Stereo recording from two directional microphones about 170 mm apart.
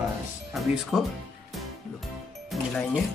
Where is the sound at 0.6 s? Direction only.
Centre (ahead or behind).